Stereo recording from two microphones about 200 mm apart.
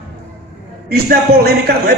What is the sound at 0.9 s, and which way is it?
A man's voice, 50° right (ahead or behind).